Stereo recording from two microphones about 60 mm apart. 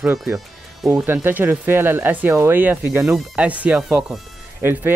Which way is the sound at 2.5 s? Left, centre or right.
Right.